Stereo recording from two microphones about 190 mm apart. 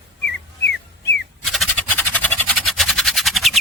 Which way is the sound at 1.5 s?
5° left (ahead or behind).